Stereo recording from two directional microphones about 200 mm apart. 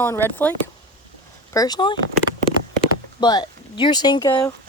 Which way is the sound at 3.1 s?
20° left (ahead or behind).